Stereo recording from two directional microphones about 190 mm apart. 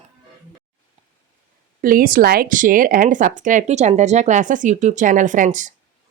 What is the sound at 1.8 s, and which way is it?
Speech, 50° right (ahead or behind).